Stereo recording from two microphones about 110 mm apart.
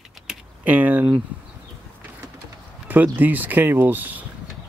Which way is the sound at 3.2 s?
15° right (ahead or behind).